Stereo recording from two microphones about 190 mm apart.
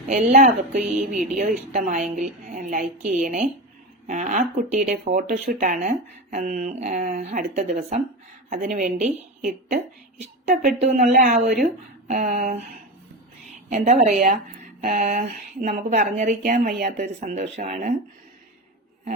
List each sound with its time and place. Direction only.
0.1 s a woman's voice: 40° right (ahead or behind)
13.7 s a woman's voice: 40° right (ahead or behind)